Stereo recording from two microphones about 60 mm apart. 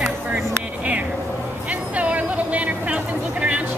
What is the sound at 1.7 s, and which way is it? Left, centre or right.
Speech, right.